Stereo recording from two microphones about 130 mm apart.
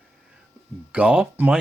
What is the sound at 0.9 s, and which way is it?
Speech, 10° right (ahead or behind).